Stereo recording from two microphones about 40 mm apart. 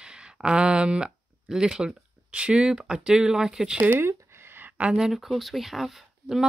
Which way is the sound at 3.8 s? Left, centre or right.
Right.